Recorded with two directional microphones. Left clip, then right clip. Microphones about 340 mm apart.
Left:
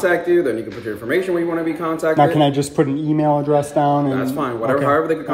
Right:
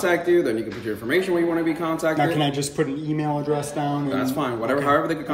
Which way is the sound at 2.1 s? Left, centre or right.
Left.